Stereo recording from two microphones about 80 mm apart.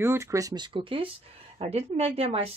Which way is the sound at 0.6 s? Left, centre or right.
Right.